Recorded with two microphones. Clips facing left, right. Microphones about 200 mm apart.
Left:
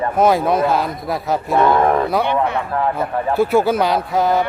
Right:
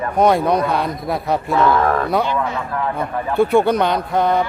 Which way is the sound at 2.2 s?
60° left (ahead or behind).